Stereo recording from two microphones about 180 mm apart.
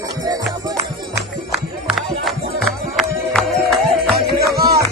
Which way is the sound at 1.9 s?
Centre (ahead or behind).